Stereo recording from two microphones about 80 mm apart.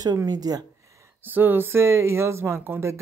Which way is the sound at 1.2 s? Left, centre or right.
Right.